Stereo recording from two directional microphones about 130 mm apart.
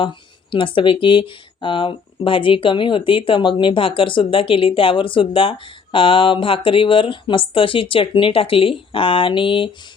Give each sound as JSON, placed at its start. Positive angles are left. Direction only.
{"t": 0.0, "sound": "speech", "side_deg": 40}